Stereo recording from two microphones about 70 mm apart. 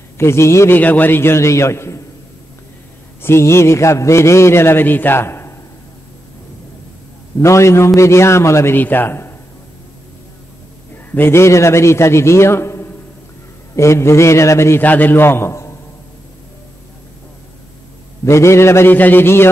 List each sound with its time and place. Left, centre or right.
0.2 s a man's voice: left
0.7 s a man's voice: left
3.2 s a man's voice: left
7.3 s a man's voice: left
8.7 s a man's voice: left
11.1 s a man's voice: left
13.7 s a sound: left
14.8 s a man's voice: left
18.2 s a man's voice: left